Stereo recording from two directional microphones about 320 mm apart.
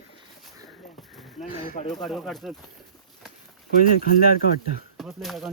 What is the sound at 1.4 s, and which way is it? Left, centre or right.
Speech, left.